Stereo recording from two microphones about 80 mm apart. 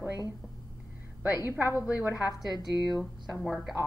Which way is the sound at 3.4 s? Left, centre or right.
Centre.